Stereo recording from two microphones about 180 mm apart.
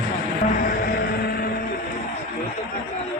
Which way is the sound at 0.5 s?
50° left (ahead or behind).